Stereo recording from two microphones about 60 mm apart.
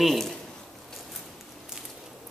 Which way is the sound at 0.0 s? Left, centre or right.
Centre.